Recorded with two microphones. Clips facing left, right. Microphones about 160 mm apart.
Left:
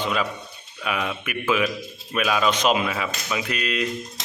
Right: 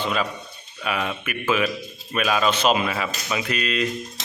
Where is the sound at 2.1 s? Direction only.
5° left (ahead or behind).